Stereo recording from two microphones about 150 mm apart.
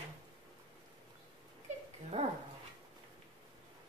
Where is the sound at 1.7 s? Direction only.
50° right (ahead or behind).